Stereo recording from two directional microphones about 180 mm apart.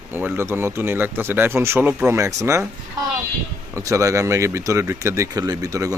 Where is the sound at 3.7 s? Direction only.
15° right (ahead or behind).